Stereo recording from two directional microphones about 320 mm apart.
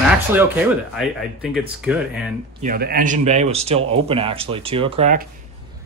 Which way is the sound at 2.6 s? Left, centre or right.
Right.